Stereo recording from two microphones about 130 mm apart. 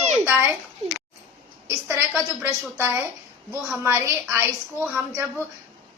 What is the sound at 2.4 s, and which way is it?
A woman's voice, 20° right (ahead or behind).